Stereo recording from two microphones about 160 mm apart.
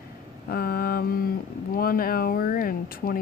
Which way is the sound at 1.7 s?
65° left (ahead or behind).